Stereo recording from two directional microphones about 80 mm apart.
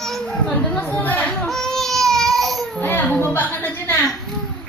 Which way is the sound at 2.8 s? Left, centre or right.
Left.